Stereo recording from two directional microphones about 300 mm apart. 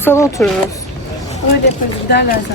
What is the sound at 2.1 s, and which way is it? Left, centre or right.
Speech, left.